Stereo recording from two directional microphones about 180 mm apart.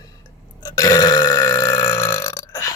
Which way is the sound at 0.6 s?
20° left (ahead or behind).